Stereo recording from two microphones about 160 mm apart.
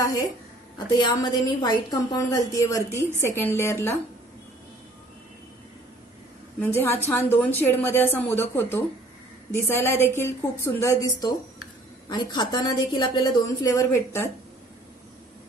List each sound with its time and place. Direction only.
0.0 s a sound: 25° left (ahead or behind)
0.9 s a woman's voice: 25° left (ahead or behind)
6.6 s a woman's voice: 15° left (ahead or behind)